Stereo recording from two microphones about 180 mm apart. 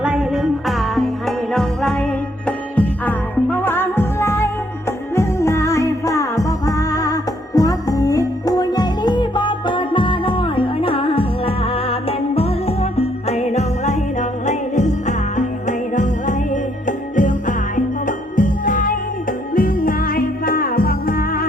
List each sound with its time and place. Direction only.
0.0 s music: 5° right (ahead or behind); by 21.4 s 55° left (ahead or behind)